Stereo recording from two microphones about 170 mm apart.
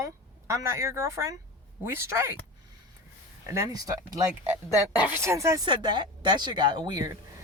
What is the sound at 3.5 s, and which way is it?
Speech, 20° right (ahead or behind).